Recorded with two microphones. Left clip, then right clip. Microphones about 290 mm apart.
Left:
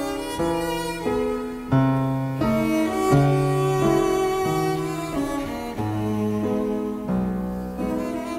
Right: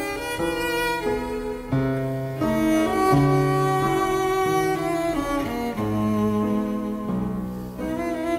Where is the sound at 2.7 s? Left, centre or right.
Right.